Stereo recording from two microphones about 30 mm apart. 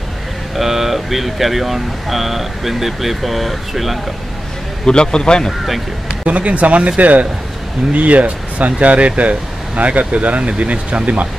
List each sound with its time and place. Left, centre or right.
0.6 s speech: centre
4.8 s a man's voice: left
6.2 s a man's voice: right